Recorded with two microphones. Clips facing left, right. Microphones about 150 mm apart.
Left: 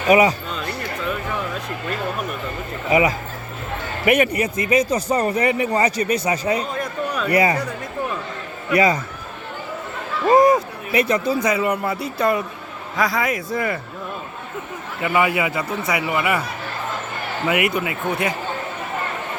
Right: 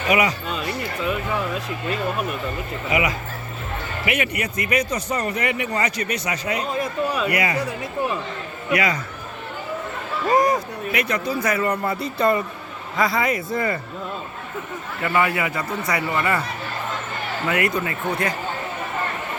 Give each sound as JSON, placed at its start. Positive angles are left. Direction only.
{"t": 0.1, "sound": "speech", "side_deg": 30}
{"t": 4.0, "sound": "speech", "side_deg": 40}
{"t": 4.4, "sound": "speech", "side_deg": 25}
{"t": 6.7, "sound": "a sound", "side_deg": -5}
{"t": 7.3, "sound": "speech", "side_deg": 35}
{"t": 8.7, "sound": "speech", "side_deg": 30}
{"t": 10.2, "sound": "speech", "side_deg": 25}
{"t": 15.0, "sound": "speech", "side_deg": 15}
{"t": 17.4, "sound": "speech", "side_deg": 15}